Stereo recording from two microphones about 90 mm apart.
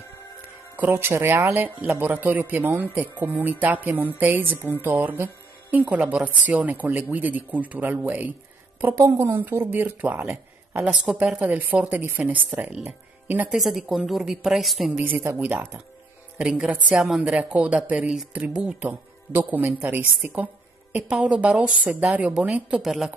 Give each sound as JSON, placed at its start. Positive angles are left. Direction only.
{"t": 0.7, "sound": "speech", "side_deg": -25}
{"t": 8.9, "sound": "a woman's voice", "side_deg": -35}
{"t": 9.2, "sound": "speech", "side_deg": -20}
{"t": 10.9, "sound": "speech", "side_deg": -10}
{"t": 13.5, "sound": "a woman's voice", "side_deg": 0}
{"t": 15.0, "sound": "speech", "side_deg": -20}
{"t": 18.9, "sound": "speech", "side_deg": -20}
{"t": 22.8, "sound": "a woman's voice", "side_deg": 0}